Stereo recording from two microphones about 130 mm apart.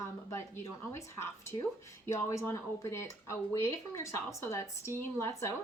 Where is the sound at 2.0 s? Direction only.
20° left (ahead or behind).